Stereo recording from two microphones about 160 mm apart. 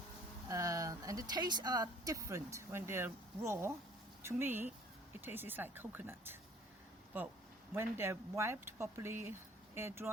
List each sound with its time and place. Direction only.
0.4 s speech: 20° right (ahead or behind)
7.7 s speech: 15° right (ahead or behind)